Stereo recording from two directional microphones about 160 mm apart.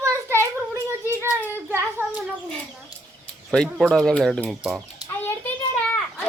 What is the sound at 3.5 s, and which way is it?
Speech, 5° left (ahead or behind).